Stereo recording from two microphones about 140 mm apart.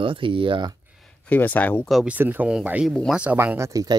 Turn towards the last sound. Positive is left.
turn(degrees=-25)  # may be behind; listen again after turning